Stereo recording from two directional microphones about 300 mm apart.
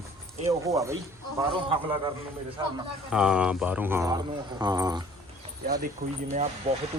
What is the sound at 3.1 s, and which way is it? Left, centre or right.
Speech, centre.